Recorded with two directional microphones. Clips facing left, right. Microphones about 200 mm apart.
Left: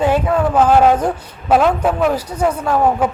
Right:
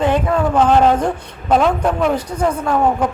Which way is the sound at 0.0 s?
5° left (ahead or behind).